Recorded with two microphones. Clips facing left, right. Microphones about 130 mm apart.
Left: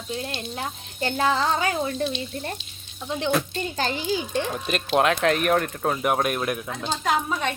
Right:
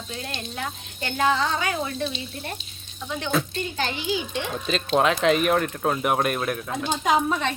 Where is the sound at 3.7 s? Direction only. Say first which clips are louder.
Left 2 dB; 40° left (ahead or behind).